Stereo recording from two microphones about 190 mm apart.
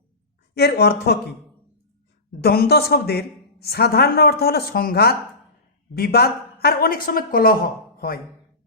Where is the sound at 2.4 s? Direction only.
55° left (ahead or behind).